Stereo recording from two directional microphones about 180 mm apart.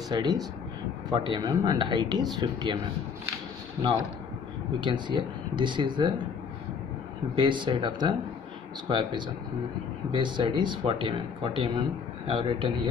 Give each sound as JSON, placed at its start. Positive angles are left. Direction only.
{"t": 0.1, "sound": "speech", "side_deg": -20}
{"t": 4.7, "sound": "speech", "side_deg": -25}
{"t": 7.3, "sound": "speech", "side_deg": -25}